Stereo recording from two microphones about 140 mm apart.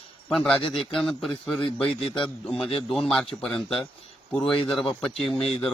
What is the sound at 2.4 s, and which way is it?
A man's voice, 5° left (ahead or behind).